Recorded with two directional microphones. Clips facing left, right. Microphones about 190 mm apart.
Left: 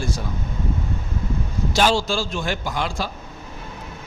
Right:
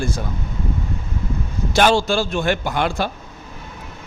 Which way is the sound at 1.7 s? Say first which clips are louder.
Right 4 dB; 60° right (ahead or behind).